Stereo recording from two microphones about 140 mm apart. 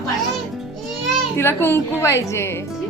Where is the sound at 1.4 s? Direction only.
15° left (ahead or behind).